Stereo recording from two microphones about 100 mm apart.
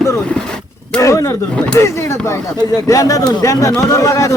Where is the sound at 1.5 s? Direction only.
10° left (ahead or behind).